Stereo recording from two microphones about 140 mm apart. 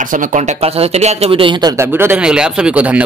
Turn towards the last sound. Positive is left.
turn(degrees=-10)  # may be behind; listen again after turning